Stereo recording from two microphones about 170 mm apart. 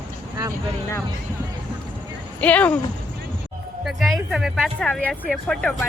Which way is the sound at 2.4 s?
10° left (ahead or behind).